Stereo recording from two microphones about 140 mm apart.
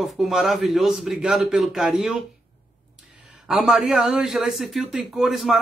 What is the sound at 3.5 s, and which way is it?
Speech, 5° right (ahead or behind).